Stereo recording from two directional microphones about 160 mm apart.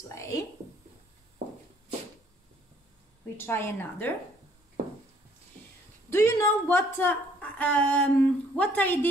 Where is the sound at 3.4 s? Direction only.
15° left (ahead or behind).